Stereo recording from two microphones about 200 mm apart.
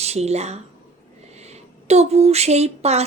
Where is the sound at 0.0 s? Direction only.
30° right (ahead or behind).